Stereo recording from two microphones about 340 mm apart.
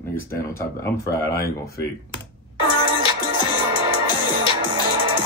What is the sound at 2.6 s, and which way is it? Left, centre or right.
Music, left.